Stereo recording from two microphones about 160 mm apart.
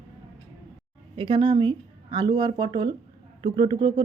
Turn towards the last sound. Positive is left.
turn(degrees=-30)  # may be behind; listen again after turning